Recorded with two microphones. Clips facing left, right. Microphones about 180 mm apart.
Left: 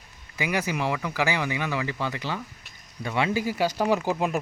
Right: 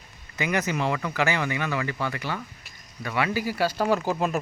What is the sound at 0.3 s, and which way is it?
Speech, 10° left (ahead or behind).